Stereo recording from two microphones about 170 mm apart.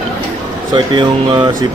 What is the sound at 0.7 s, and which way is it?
Speech, 25° right (ahead or behind).